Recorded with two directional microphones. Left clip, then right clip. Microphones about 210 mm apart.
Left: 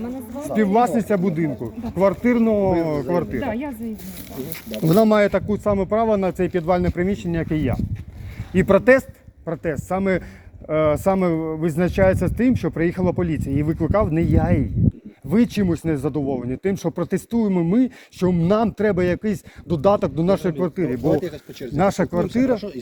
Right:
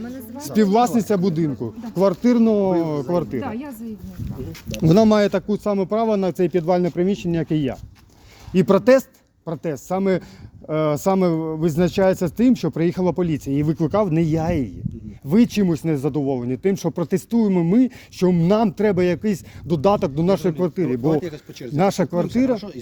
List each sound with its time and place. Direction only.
0.3 s speech: 75° right (ahead or behind)
0.6 s speech: 45° right (ahead or behind)
2.3 s speech: 50° right (ahead or behind)
2.9 s speech: 30° right (ahead or behind)
3.4 s speech: 20° right (ahead or behind)
4.7 s speech: 55° right (ahead or behind)
21.1 s speech: 40° right (ahead or behind)